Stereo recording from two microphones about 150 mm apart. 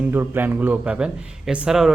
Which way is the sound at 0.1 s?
15° right (ahead or behind).